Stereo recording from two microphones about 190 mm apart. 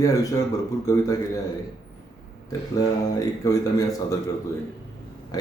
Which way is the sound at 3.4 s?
20° left (ahead or behind).